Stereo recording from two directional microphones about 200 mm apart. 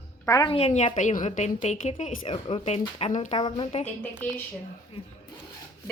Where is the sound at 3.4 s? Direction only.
25° left (ahead or behind).